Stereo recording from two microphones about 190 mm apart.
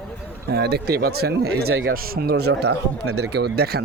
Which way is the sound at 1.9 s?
55° right (ahead or behind).